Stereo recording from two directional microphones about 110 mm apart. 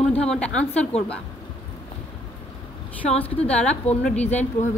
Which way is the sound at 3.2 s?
10° left (ahead or behind).